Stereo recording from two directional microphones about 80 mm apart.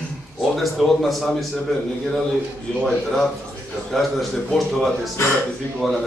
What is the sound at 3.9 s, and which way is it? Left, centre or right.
Speech, centre.